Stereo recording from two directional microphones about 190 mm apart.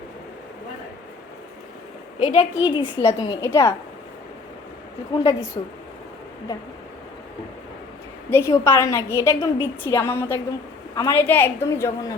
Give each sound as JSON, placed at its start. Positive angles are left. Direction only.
{"t": 2.1, "sound": "a woman's voice", "side_deg": 35}
{"t": 5.1, "sound": "a woman's voice", "side_deg": 20}
{"t": 8.3, "sound": "a woman's voice", "side_deg": 15}